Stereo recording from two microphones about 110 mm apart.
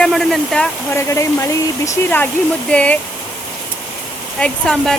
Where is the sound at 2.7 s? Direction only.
10° left (ahead or behind).